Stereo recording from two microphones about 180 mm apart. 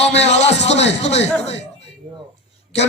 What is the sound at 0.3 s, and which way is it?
Speech, 35° left (ahead or behind).